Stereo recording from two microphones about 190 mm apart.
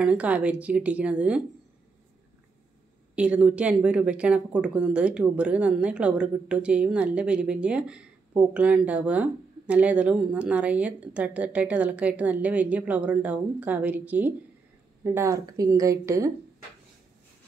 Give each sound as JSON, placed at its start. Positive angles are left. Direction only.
{"t": 0.0, "sound": "speech", "side_deg": -5}
{"t": 3.2, "sound": "speech", "side_deg": -5}